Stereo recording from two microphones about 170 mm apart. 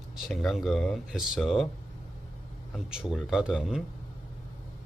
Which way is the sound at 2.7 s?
5° right (ahead or behind).